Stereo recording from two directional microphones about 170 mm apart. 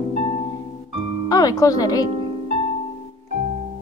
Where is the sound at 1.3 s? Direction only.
20° left (ahead or behind).